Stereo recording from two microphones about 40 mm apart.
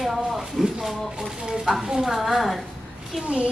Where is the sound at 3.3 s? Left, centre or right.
Right.